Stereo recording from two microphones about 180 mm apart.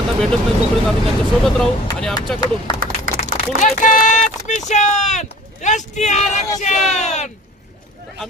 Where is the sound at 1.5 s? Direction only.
5° left (ahead or behind).